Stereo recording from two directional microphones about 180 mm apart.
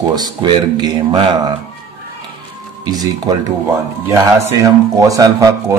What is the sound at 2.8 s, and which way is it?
Speech, 20° right (ahead or behind).